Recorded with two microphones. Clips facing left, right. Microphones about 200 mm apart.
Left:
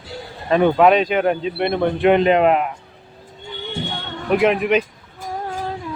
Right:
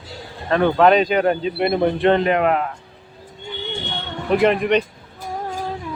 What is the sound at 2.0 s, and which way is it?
Speech, 20° left (ahead or behind).